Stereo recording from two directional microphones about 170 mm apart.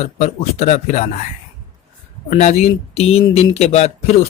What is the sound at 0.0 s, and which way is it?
Speech, 40° left (ahead or behind).